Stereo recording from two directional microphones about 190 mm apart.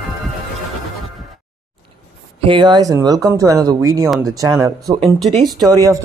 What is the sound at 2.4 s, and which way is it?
A man's voice, 25° right (ahead or behind).